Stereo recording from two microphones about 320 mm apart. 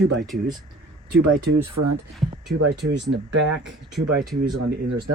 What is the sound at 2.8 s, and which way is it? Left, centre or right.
Speech, right.